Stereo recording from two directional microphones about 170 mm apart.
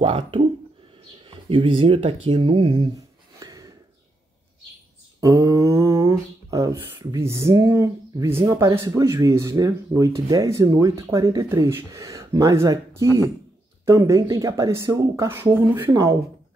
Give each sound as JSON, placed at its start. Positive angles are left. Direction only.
{"t": 0.0, "sound": "speech", "side_deg": -30}
{"t": 5.2, "sound": "speech", "side_deg": -20}